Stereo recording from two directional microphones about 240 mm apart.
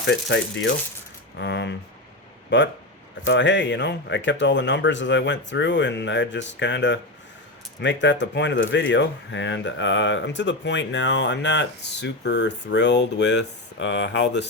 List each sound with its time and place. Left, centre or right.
0.0 s speech: left